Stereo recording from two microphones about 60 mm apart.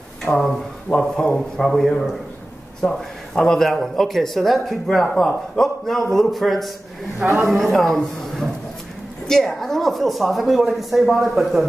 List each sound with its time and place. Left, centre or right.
0.3 s speech: left
0.9 s speech: centre